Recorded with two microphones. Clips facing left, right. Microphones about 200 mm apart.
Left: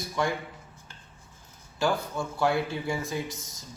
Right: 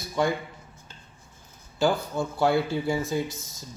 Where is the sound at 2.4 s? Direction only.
30° right (ahead or behind).